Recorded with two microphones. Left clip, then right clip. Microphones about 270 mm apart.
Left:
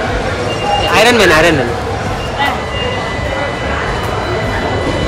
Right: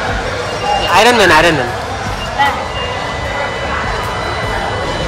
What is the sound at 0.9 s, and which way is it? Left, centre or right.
Speech, centre.